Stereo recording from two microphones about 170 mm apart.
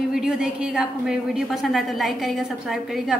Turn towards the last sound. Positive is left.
turn(degrees=0)  # may be behind; listen again after turning